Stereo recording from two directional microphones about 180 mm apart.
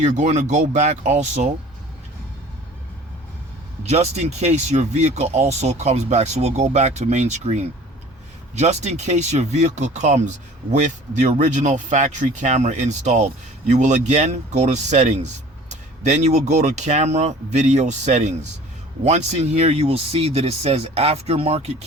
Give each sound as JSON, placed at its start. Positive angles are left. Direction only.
{"t": 0.0, "sound": "speech", "side_deg": -40}
{"t": 3.8, "sound": "speech", "side_deg": -40}